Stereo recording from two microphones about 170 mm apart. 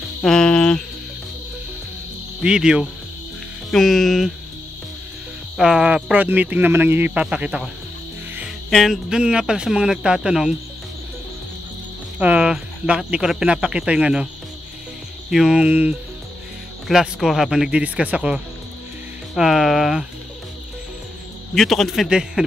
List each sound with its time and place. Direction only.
0.2 s speech: 5° left (ahead or behind)
2.4 s speech: 5° right (ahead or behind)
5.6 s speech: 5° right (ahead or behind)
12.2 s speech: 5° right (ahead or behind)
21.5 s speech: centre (ahead or behind)